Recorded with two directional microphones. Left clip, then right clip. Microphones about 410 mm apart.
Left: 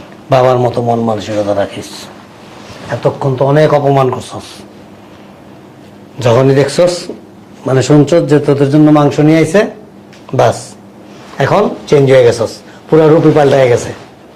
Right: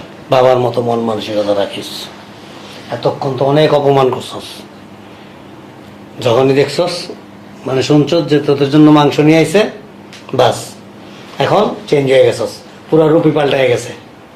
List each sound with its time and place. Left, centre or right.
0.3 s a man's voice: left
3.0 s speech: left
3.7 s a man's voice: left
6.1 s a man's voice: left
11.3 s speech: left